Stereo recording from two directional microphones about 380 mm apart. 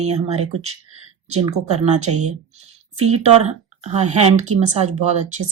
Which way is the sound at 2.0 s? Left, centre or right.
Right.